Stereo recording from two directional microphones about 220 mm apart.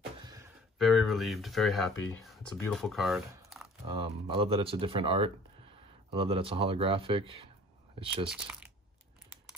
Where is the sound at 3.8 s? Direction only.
25° right (ahead or behind).